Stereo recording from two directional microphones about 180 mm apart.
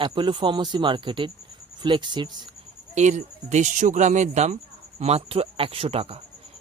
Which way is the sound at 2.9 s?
40° right (ahead or behind).